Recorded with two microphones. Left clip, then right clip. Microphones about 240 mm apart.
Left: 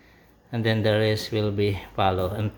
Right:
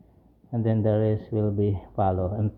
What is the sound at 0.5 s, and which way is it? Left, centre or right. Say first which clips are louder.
Speech: left 2 dB; centre.